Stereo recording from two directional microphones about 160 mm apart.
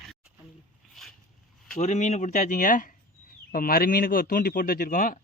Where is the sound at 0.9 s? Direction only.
Centre (ahead or behind).